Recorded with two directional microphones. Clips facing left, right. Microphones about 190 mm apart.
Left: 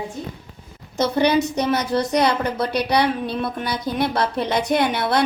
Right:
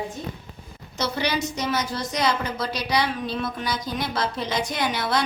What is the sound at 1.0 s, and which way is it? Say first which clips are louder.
A woman's voice: left 8 dB; 50° left (ahead or behind).